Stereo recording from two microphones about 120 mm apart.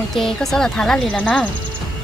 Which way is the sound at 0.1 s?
Centre (ahead or behind).